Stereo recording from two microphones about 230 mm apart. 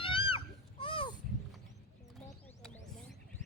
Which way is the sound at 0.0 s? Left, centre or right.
Left.